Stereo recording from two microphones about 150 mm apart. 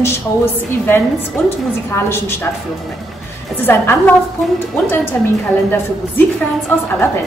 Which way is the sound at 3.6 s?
15° left (ahead or behind).